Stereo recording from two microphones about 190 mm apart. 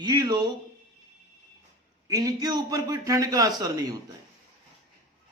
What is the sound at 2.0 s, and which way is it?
A man's voice, 20° right (ahead or behind).